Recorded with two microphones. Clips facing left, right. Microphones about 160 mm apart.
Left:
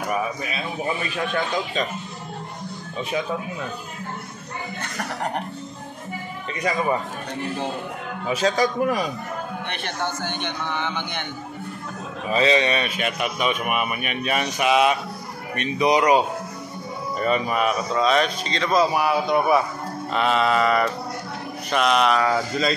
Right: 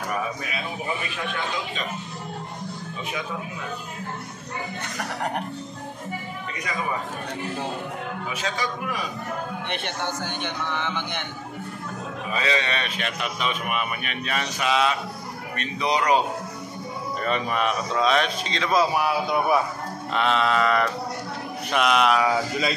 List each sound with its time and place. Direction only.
8.3 s a man's voice: 35° left (ahead or behind)
10.2 s a man's voice: 5° right (ahead or behind)
12.3 s a man's voice: 25° left (ahead or behind)
17.2 s a man's voice: 5° left (ahead or behind)